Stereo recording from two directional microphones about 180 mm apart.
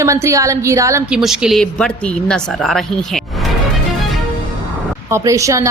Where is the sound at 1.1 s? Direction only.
5° right (ahead or behind).